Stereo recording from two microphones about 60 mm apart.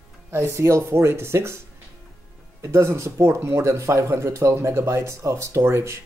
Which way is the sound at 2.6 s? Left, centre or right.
Right.